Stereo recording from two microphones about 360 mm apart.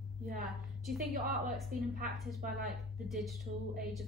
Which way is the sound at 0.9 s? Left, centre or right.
Right.